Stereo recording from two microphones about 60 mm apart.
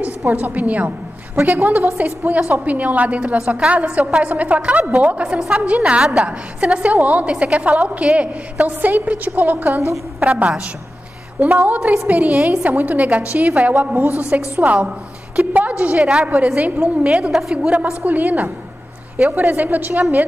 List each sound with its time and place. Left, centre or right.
0.3 s a woman's voice: right
1.5 s a woman's voice: right
1.8 s a woman's voice: right
10.2 s a woman's voice: centre
11.6 s a woman's voice: right
17.3 s a woman's voice: centre
17.6 s a woman's voice: centre